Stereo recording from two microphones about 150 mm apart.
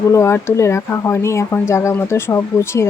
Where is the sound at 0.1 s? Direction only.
20° left (ahead or behind).